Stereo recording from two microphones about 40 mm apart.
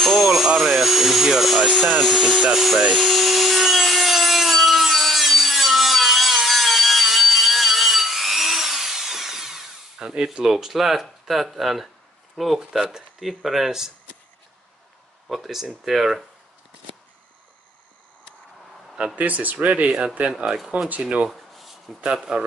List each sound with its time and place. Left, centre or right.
0.0 s a sound: centre
2.0 s speech: centre
3.0 s wood: centre
10.4 s speech: centre
15.2 s speech: centre
19.1 s speech: right
20.4 s speech: centre
21.0 s speech: right
21.3 s a sound: centre
22.0 s speech: centre